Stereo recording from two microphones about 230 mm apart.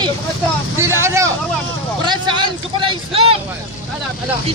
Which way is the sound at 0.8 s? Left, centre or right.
Centre.